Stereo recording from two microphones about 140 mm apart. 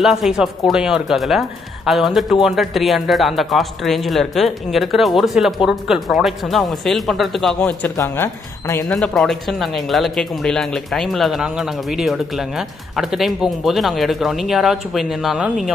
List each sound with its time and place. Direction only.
0.0 s speech: centre (ahead or behind)
7.9 s speech: 20° left (ahead or behind)
8.8 s speech: 5° left (ahead or behind)